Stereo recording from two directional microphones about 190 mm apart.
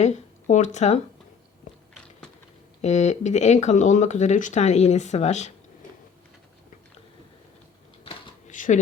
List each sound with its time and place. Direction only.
0.0 s speech: 40° left (ahead or behind)
1.7 s biting: 40° left (ahead or behind)
2.8 s speech: 35° left (ahead or behind)
8.0 s a sound: 40° left (ahead or behind)